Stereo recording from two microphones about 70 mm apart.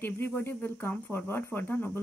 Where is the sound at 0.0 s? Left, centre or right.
Left.